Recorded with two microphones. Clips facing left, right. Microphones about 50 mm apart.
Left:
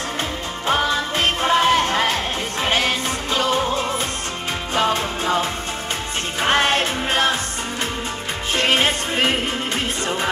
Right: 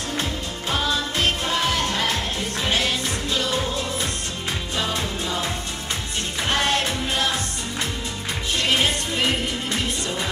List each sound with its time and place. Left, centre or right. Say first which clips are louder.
0.7 s music: left 5 dB; left
8.5 s music: left 4 dB; left